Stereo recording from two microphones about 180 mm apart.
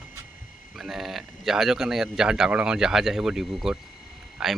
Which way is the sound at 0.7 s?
Centre (ahead or behind).